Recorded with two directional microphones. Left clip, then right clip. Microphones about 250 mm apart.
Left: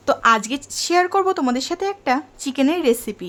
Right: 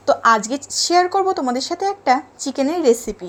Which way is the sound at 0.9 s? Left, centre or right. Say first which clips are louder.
Right 1 dB; centre.